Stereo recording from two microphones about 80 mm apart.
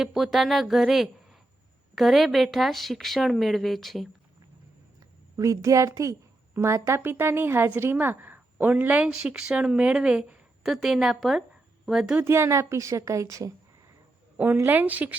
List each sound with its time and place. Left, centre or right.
0.0 s a woman's voice: centre
5.4 s a woman's voice: right; by 12.1 s centre
12.2 s speech: right
14.3 s a woman's voice: right